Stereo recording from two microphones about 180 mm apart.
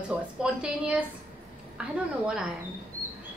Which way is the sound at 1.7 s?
5° right (ahead or behind).